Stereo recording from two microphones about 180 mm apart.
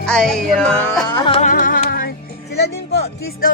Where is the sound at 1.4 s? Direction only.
50° left (ahead or behind).